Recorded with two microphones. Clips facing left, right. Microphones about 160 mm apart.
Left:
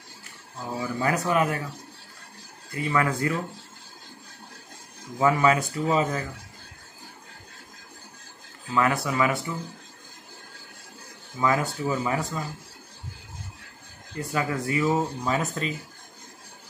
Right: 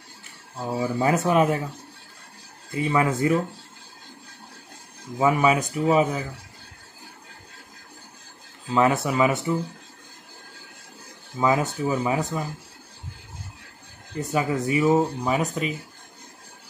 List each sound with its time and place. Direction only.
0.7 s speech: 25° right (ahead or behind)
2.7 s speech: 20° right (ahead or behind)
5.2 s speech: 15° right (ahead or behind)
8.7 s speech: 20° right (ahead or behind)
11.3 s speech: 20° right (ahead or behind)
14.1 s speech: 20° right (ahead or behind)